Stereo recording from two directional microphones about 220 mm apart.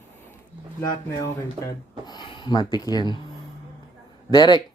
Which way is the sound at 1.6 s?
20° left (ahead or behind).